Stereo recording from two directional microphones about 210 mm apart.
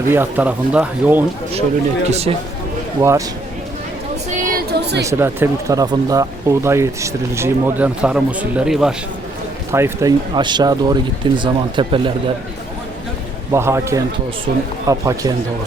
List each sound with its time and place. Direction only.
0.1 s speech: 10° right (ahead or behind)
2.0 s speech: 30° right (ahead or behind)
3.0 s speech: 15° right (ahead or behind)
4.4 s a sound: 50° right (ahead or behind)
5.0 s speech: 10° right (ahead or behind)
9.7 s speech: 15° right (ahead or behind)
13.5 s speech: 10° right (ahead or behind)
14.5 s speech: 45° right (ahead or behind)
14.8 s speech: 15° right (ahead or behind)